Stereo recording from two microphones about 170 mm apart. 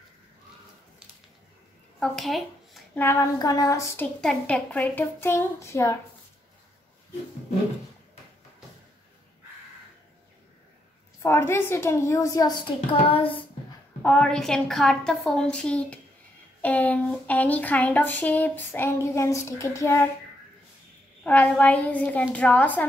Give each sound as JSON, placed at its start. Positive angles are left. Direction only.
{"t": 2.0, "sound": "a sound", "side_deg": 0}
{"t": 3.0, "sound": "speech", "side_deg": 15}
{"t": 11.2, "sound": "speech", "side_deg": 15}
{"t": 13.1, "sound": "speech", "side_deg": 30}
{"t": 14.0, "sound": "a woman's voice", "side_deg": 5}
{"t": 21.2, "sound": "speech", "side_deg": 10}